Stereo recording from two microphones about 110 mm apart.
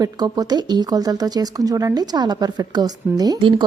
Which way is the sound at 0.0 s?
35° right (ahead or behind).